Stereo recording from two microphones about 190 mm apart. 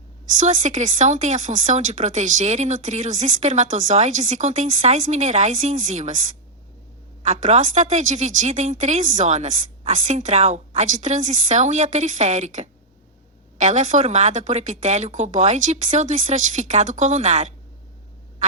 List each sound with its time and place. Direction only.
0.3 s speech: 40° right (ahead or behind)